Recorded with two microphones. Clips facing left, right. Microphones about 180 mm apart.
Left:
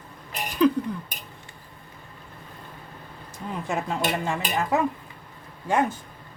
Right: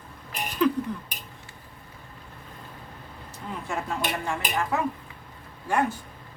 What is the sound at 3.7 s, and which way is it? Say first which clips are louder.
Speech: left 3 dB; 20° left (ahead or behind).